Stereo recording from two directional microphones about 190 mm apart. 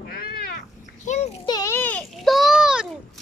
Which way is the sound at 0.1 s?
55° left (ahead or behind).